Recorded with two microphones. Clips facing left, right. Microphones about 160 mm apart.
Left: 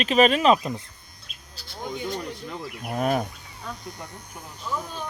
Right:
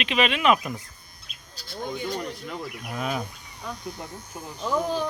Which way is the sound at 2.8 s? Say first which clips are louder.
Left 6 dB; 45° left (ahead or behind).